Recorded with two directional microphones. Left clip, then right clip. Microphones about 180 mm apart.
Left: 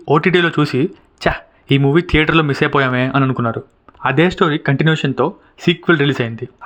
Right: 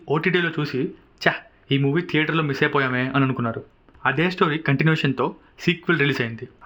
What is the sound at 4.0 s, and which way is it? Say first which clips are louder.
Speech: left 6 dB; 40° left (ahead or behind).